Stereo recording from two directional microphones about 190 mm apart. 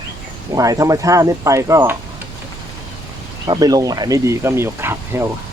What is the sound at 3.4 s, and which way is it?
Speech, 20° right (ahead or behind).